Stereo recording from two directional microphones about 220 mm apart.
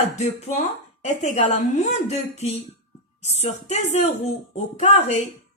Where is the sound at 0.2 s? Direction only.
30° left (ahead or behind).